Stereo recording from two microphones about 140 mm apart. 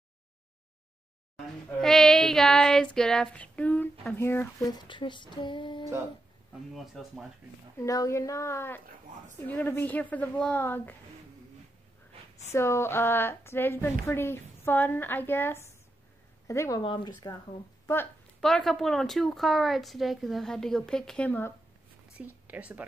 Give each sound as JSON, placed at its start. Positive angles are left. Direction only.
{"t": 1.8, "sound": "child singing", "side_deg": 5}
{"t": 4.0, "sound": "a woman's voice", "side_deg": 15}
{"t": 4.6, "sound": "speech", "side_deg": 30}
{"t": 6.7, "sound": "a woman's voice", "side_deg": 0}
{"t": 7.8, "sound": "a woman's voice", "side_deg": 25}
{"t": 12.5, "sound": "a woman's voice", "side_deg": 20}
{"t": 16.8, "sound": "speech", "side_deg": 35}
{"t": 18.4, "sound": "a woman's voice", "side_deg": 5}
{"t": 22.2, "sound": "speech", "side_deg": -10}